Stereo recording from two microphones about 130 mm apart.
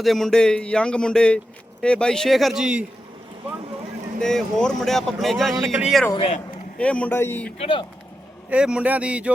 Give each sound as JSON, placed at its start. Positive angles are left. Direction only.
{"t": 0.0, "sound": "speech", "side_deg": 0}
{"t": 4.2, "sound": "speech", "side_deg": 5}
{"t": 6.7, "sound": "speech", "side_deg": 10}
{"t": 7.6, "sound": "speech", "side_deg": 40}
{"t": 8.4, "sound": "speech", "side_deg": -10}